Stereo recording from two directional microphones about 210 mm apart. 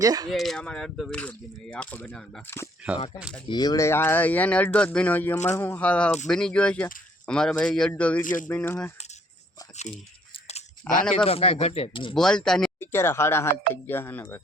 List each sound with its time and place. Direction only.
0.0 s speech: 15° right (ahead or behind)
0.3 s speech: centre (ahead or behind)
3.2 s speech: 5° right (ahead or behind)
3.5 s speech: 20° left (ahead or behind)
8.2 s speech: 40° left (ahead or behind)
8.4 s speech: 10° left (ahead or behind)
10.3 s chewing: 30° left (ahead or behind)
11.3 s speech: 30° left (ahead or behind)
12.1 s speech: 5° left (ahead or behind)